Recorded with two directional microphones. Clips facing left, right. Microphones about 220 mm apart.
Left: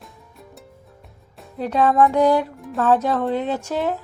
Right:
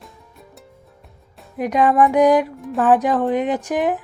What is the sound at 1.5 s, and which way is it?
Speech, 15° right (ahead or behind).